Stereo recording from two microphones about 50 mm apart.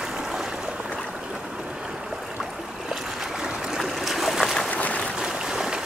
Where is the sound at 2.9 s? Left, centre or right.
Centre.